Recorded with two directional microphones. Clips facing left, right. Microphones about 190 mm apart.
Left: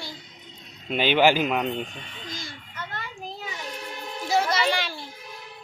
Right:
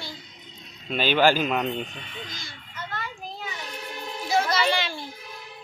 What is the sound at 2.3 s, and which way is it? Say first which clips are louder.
Speech: left 5 dB; 40° left (ahead or behind).